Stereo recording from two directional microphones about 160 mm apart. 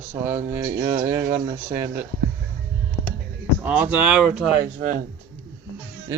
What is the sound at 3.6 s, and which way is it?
Speech, 10° right (ahead or behind).